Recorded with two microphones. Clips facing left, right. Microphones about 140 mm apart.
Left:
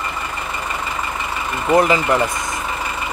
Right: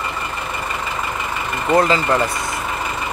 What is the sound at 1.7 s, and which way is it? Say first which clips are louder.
Speech: left 1 dB; 15° left (ahead or behind).